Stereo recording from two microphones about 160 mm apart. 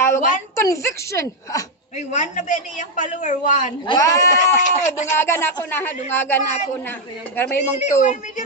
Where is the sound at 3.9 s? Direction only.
20° left (ahead or behind).